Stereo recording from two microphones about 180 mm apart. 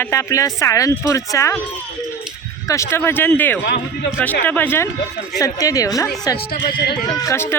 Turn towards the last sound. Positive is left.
turn(degrees=15)  # may be behind; listen again after turning